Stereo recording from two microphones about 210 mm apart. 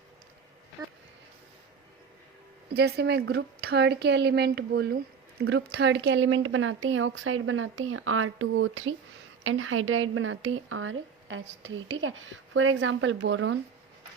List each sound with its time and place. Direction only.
2.7 s a woman's voice: 50° right (ahead or behind)